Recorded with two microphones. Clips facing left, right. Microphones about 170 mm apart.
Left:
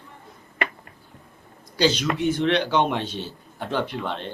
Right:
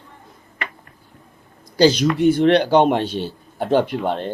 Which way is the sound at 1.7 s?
40° right (ahead or behind).